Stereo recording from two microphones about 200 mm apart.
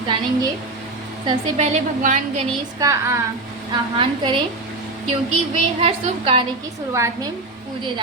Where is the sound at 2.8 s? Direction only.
15° right (ahead or behind).